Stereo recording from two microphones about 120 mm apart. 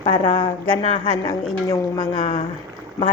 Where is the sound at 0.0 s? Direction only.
40° left (ahead or behind).